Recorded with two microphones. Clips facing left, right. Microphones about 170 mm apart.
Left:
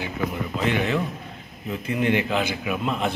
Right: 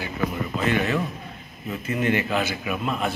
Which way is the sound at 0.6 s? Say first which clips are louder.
Even; 15° left (ahead or behind).